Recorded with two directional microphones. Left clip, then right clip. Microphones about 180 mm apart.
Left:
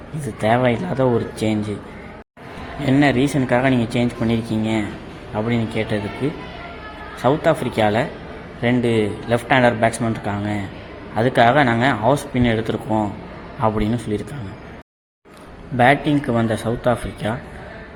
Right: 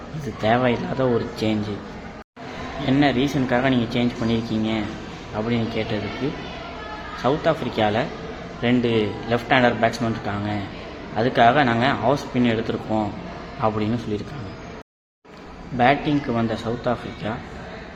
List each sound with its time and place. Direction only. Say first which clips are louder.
0.4 s speech: left 2 dB; 35° left (ahead or behind)
2.8 s speech: left 3 dB; 40° left (ahead or behind)
7.2 s speech: left 4 dB; 40° left (ahead or behind)
15.8 s speech: left 3 dB; 45° left (ahead or behind)